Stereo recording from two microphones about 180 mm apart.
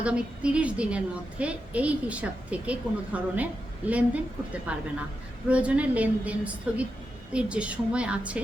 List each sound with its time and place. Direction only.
0.0 s a woman's voice: 5° right (ahead or behind)